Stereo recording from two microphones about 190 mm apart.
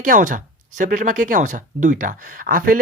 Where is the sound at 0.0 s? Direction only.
45° right (ahead or behind).